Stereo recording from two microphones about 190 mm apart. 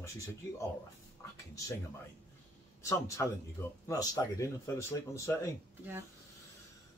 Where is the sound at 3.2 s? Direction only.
15° left (ahead or behind).